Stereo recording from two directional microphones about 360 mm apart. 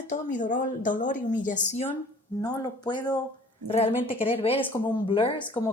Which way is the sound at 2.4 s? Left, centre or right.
Centre.